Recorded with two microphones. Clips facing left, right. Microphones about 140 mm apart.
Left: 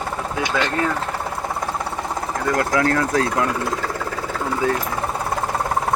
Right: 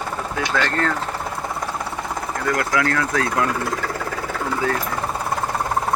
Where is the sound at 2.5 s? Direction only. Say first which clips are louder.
Left 3 dB; 30° left (ahead or behind).